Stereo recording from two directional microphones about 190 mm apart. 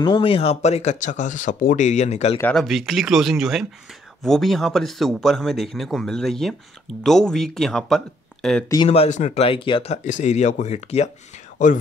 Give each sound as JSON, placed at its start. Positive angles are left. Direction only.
{"t": 0.0, "sound": "speech", "side_deg": 25}
{"t": 2.5, "sound": "speech", "side_deg": 0}
{"t": 8.8, "sound": "speech", "side_deg": 35}
{"t": 11.5, "sound": "whispering", "side_deg": 40}